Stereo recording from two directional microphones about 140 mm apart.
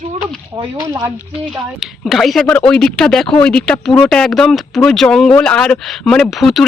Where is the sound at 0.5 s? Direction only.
25° right (ahead or behind).